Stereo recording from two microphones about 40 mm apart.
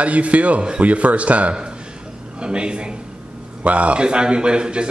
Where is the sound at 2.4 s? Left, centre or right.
Right.